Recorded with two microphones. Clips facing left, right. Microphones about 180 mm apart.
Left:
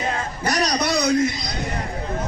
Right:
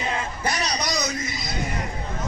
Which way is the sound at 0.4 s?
65° left (ahead or behind).